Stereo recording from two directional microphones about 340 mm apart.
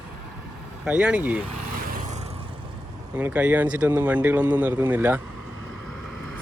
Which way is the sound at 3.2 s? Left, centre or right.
Centre.